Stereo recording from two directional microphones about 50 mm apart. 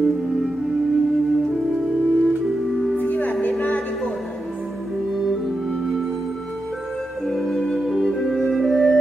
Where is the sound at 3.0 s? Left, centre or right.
Left.